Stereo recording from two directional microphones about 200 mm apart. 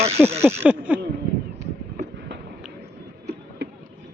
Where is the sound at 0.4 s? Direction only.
10° right (ahead or behind).